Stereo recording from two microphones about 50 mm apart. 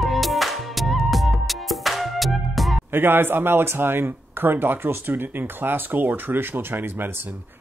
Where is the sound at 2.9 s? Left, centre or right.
Right.